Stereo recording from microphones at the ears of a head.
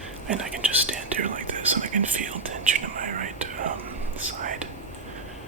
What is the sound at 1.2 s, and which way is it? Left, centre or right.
Speech, right.